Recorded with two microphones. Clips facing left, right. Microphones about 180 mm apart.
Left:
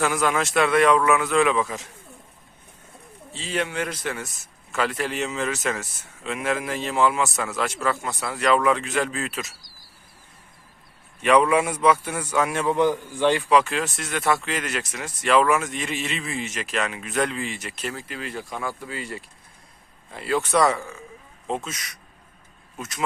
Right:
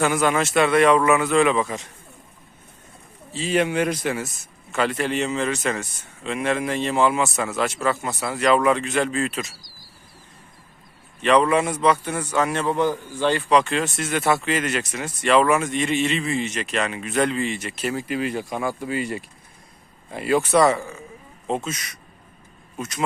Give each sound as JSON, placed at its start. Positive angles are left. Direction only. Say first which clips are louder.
{"t": 0.0, "sound": "a man's voice", "louder": "right 2 dB", "side_deg": 0}
{"t": 3.3, "sound": "a man's voice", "louder": "right 6 dB", "side_deg": -15}
{"t": 4.7, "sound": "a man's voice", "louder": "right 3 dB", "side_deg": 0}
{"t": 11.2, "sound": "a man's voice", "louder": "right 1 dB", "side_deg": 10}
{"t": 17.9, "sound": "a man's voice", "louder": "right 8 dB", "side_deg": -15}
{"t": 20.5, "sound": "a man's voice", "louder": "right 2 dB", "side_deg": 0}